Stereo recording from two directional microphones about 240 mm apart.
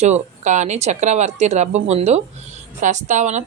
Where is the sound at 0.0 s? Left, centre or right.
Right.